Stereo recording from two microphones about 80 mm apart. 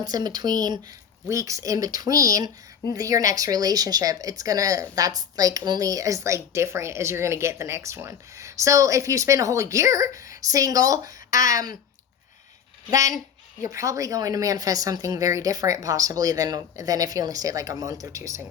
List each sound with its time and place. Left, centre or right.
0.0 s speech: right
1.3 s speech: right
12.9 s speech: right